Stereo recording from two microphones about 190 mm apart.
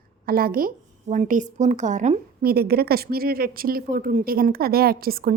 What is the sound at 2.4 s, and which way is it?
A woman's voice, 55° right (ahead or behind).